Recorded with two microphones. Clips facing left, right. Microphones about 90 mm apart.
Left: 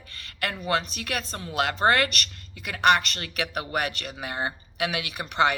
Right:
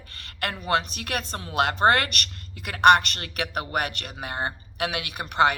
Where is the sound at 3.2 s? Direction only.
40° right (ahead or behind).